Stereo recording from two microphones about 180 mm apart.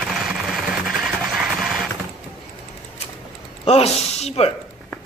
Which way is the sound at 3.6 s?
35° left (ahead or behind).